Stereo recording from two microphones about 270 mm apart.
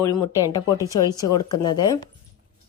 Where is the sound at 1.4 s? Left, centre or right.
Left.